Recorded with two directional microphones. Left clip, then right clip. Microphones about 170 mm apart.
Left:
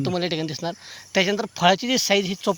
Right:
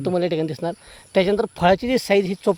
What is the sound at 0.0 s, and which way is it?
Speech, 65° right (ahead or behind).